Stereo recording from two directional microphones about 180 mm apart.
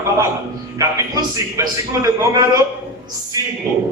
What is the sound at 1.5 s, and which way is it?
Speech, 20° right (ahead or behind).